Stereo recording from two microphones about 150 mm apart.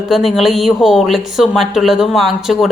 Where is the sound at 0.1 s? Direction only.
Centre (ahead or behind).